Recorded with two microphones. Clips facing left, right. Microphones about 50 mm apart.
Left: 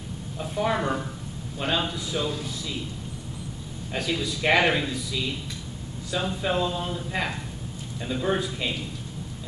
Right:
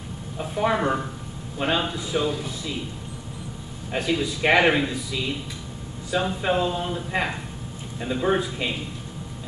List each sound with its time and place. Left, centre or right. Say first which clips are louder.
0.4 s a man's voice: right 3 dB; centre
3.9 s a man's voice: right 4 dB; centre